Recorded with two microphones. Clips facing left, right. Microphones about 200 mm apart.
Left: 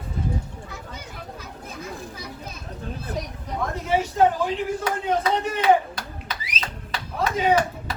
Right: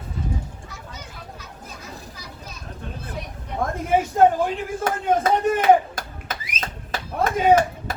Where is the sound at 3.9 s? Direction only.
50° right (ahead or behind).